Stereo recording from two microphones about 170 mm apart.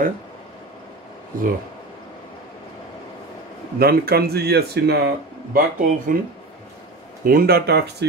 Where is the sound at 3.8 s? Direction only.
65° right (ahead or behind).